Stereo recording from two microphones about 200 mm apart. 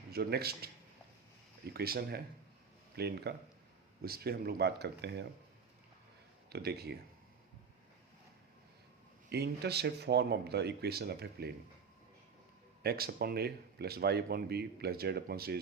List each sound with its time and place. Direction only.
0.1 s speech: 55° right (ahead or behind)
6.5 s speech: 50° right (ahead or behind)
9.3 s speech: 55° right (ahead or behind)
12.8 s speech: 50° right (ahead or behind)